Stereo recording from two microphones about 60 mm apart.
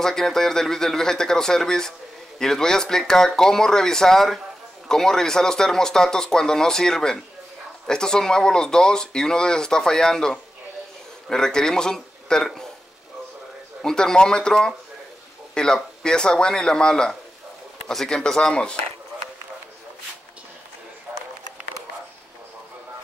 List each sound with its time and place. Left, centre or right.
0.0 s a man's voice: centre
13.8 s a man's voice: centre
21.1 s a sound: right